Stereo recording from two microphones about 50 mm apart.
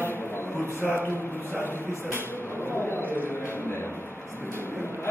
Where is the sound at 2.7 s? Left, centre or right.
Left.